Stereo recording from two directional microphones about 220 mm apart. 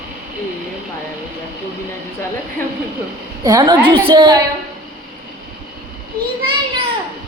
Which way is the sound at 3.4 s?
20° right (ahead or behind).